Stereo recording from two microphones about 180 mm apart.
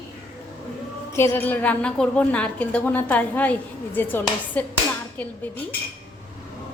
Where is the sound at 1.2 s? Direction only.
10° left (ahead or behind).